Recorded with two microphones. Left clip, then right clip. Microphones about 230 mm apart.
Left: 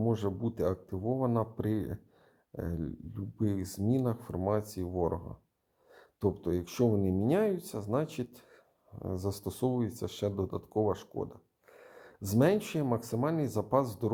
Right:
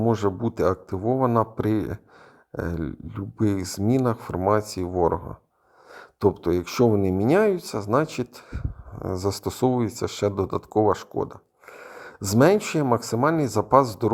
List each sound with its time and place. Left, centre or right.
0.0 s speech: right